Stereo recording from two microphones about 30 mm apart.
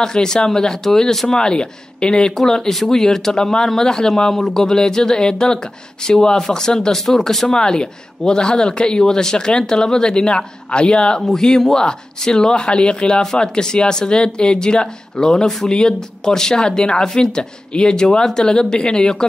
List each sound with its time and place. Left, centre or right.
0.0 s speech: left
2.9 s speech: centre
7.1 s speech: centre
7.5 s speech: left
13.2 s speech: left